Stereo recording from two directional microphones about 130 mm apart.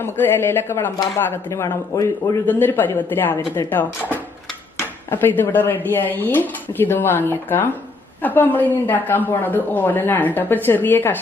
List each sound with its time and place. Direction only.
0.0 s speech: 15° left (ahead or behind)